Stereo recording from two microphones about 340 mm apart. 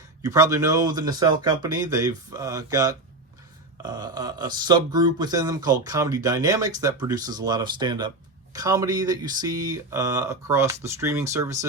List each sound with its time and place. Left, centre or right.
0.2 s speech: centre